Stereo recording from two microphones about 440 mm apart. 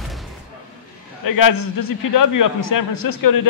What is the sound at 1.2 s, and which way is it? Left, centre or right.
A man's voice, left.